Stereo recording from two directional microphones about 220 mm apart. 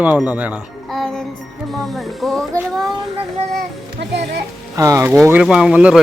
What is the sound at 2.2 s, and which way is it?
Speech, centre (ahead or behind).